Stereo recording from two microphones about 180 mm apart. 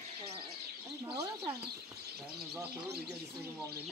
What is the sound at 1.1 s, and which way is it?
Speech, 15° right (ahead or behind).